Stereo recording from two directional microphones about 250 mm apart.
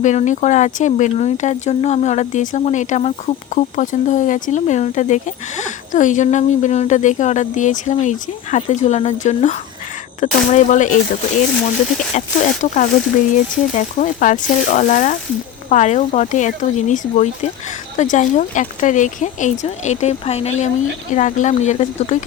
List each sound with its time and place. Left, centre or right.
0.0 s speech: left
12.1 s speech: left